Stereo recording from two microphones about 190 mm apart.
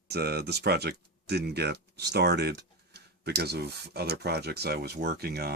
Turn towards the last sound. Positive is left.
turn(degrees=-55)  # may be behind; listen again after turning